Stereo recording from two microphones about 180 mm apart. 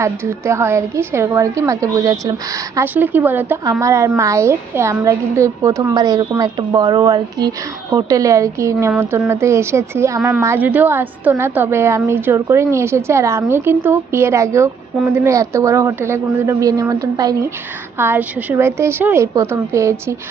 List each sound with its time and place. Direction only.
0.0 s a woman's voice: 15° right (ahead or behind)